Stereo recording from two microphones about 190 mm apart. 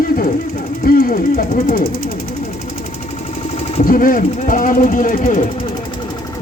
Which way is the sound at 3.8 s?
45° left (ahead or behind).